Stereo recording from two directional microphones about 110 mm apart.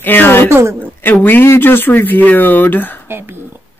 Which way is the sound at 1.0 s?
15° left (ahead or behind).